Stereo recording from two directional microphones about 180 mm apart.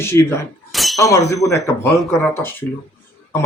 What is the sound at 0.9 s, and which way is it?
Speech, 20° left (ahead or behind).